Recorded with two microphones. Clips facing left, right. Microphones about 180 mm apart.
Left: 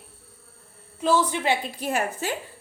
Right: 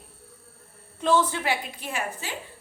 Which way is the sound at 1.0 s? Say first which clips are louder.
Left 1 dB; 10° left (ahead or behind).